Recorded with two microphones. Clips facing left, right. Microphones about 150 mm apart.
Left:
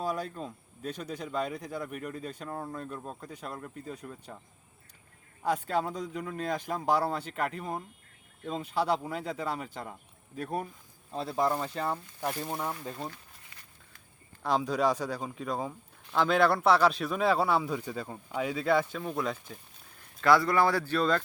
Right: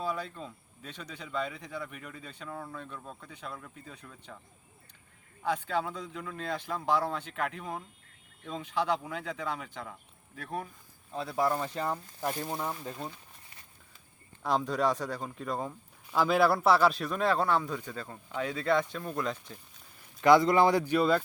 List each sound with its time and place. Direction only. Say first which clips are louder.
0.0 s speech: left 2 dB; 45° left (ahead or behind)
5.4 s speech: left 2 dB; 40° left (ahead or behind)
11.2 s speech: left 1 dB; 25° left (ahead or behind)
11.8 s speech: even; 5° left (ahead or behind)
14.4 s speech: left 1 dB; centre (ahead or behind)
20.2 s speech: right 2 dB; 20° right (ahead or behind)